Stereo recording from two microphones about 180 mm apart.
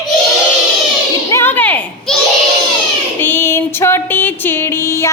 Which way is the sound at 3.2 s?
10° left (ahead or behind).